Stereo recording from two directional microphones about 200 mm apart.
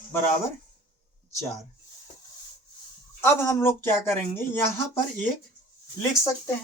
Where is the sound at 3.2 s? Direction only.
10° left (ahead or behind).